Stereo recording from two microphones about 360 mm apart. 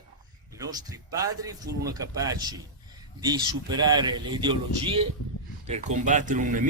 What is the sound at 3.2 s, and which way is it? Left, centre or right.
Speech, centre.